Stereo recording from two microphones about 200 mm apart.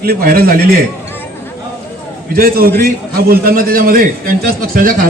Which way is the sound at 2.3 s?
50° right (ahead or behind).